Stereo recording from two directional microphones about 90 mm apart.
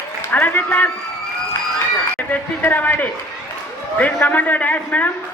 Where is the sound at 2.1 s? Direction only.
20° left (ahead or behind).